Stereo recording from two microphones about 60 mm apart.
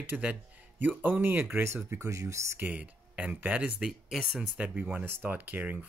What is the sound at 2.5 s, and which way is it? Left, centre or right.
Speech, right.